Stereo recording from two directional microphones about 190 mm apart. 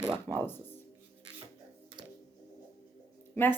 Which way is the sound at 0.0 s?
20° right (ahead or behind).